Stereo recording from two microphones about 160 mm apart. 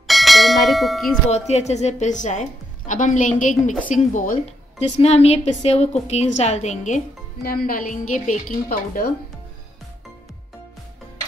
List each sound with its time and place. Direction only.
0.0 s bell: centre (ahead or behind)
1.5 s a woman's voice: 45° left (ahead or behind)
4.7 s a woman's voice: 40° left (ahead or behind)
7.4 s a woman's voice: 65° left (ahead or behind)